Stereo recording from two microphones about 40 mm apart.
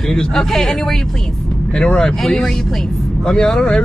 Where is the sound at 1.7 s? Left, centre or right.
Left.